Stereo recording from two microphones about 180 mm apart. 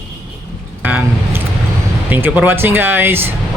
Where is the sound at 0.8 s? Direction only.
10° right (ahead or behind).